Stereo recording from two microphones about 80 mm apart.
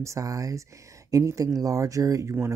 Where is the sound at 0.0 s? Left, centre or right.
Right.